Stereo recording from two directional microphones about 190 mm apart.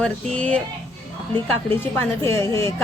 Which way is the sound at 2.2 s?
15° left (ahead or behind).